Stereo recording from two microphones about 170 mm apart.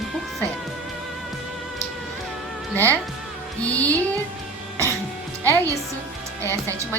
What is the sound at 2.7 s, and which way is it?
A woman's voice, 10° left (ahead or behind).